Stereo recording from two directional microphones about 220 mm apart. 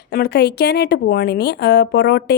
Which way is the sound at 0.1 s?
45° left (ahead or behind).